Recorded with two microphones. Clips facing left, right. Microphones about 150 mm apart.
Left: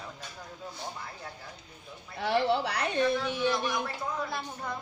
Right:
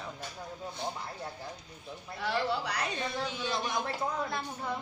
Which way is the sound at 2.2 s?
60° left (ahead or behind).